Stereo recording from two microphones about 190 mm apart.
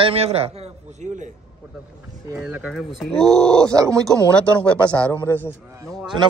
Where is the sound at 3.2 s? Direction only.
20° right (ahead or behind).